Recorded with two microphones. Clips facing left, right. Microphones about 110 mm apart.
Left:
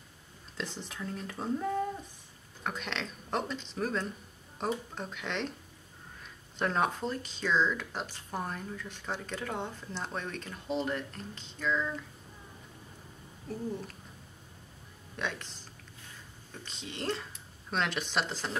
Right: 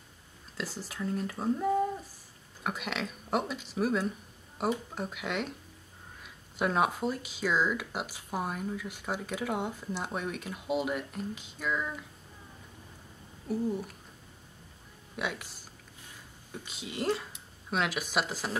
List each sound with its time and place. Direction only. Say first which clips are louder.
0.6 s speech: right 2 dB; 5° right (ahead or behind)
13.5 s speech: right 5 dB; 10° right (ahead or behind)
15.1 s speech: right 1 dB; 10° right (ahead or behind)